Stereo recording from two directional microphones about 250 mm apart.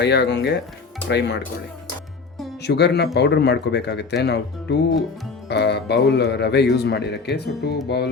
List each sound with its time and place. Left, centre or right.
0.0 s speech: left
2.6 s speech: left